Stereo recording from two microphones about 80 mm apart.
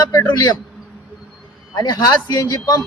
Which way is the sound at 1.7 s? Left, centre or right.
Left.